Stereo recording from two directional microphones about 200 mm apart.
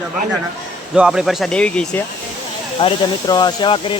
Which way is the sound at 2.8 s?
20° left (ahead or behind).